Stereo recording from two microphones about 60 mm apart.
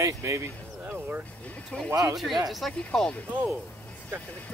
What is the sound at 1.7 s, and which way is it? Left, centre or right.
Speech, centre.